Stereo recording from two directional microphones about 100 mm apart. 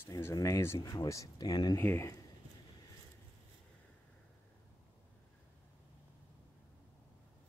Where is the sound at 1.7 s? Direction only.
25° left (ahead or behind).